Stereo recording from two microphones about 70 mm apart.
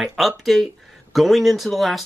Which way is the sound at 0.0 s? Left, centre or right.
Centre.